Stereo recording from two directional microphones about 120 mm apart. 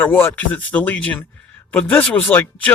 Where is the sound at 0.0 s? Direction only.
15° left (ahead or behind).